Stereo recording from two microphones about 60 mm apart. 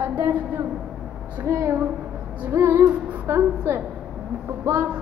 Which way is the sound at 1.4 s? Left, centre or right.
Right.